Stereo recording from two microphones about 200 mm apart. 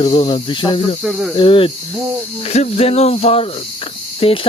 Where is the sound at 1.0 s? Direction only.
5° right (ahead or behind).